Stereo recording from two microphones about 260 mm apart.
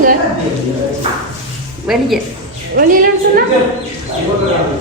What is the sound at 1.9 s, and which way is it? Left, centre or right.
Speech, centre.